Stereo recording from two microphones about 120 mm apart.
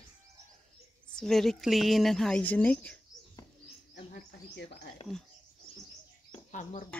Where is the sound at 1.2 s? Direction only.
5° left (ahead or behind).